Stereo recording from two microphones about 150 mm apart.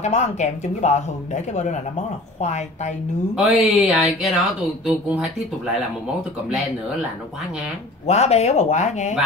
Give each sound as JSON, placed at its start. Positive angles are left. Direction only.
{"t": 0.0, "sound": "speech", "side_deg": 50}
{"t": 3.3, "sound": "speech", "side_deg": -5}
{"t": 8.1, "sound": "speech", "side_deg": 45}